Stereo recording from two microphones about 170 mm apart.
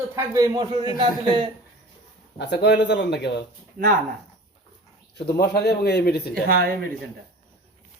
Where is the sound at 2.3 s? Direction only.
85° left.